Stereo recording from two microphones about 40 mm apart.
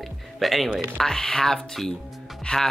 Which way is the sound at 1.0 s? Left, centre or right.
Centre.